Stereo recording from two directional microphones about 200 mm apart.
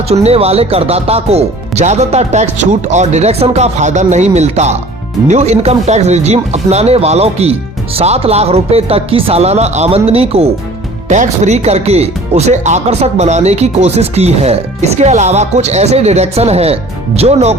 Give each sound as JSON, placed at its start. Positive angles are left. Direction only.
{"t": 0.1, "sound": "speech", "side_deg": -30}